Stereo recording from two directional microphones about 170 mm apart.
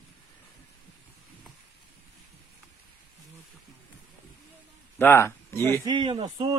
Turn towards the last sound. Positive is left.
turn(degrees=-30)  # may be behind; listen again after turning